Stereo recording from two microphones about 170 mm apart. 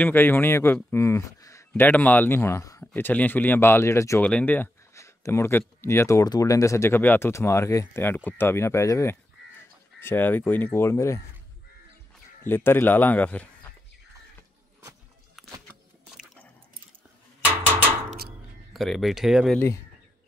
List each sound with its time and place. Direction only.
0.0 s speech: 10° left (ahead or behind)
12.4 s speech: 15° left (ahead or behind)
18.7 s speech: centre (ahead or behind)